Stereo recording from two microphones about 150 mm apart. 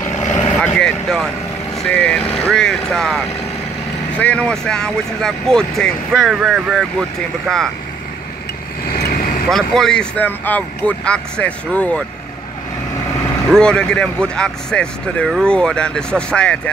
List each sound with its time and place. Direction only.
0.2 s vehicle: 50° left (ahead or behind)
0.6 s vehicle: 5° left (ahead or behind)
1.9 s speech: 10° left (ahead or behind)
9.0 s vehicle: 75° left (ahead or behind)
9.5 s speech: 5° left (ahead or behind)
13.5 s speech: 5° left (ahead or behind)